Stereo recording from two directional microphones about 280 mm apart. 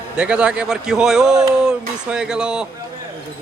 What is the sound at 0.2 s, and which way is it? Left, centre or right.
Speech, centre.